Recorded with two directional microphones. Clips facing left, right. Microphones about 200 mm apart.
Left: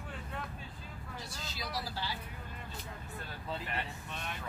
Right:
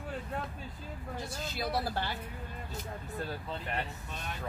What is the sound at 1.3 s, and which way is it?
Speech, 55° right (ahead or behind).